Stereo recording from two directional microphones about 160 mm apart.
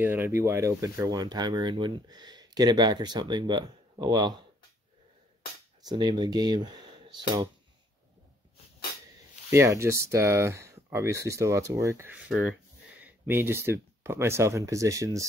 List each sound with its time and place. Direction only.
0.0 s speech: 15° right (ahead or behind)
5.8 s speech: 25° right (ahead or behind)
9.5 s speech: 15° right (ahead or behind)
12.3 s speech: centre (ahead or behind)
13.0 s speech: 15° right (ahead or behind)